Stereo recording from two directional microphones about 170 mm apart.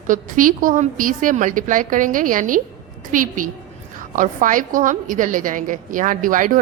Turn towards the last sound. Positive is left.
turn(degrees=-55)  # may be behind; listen again after turning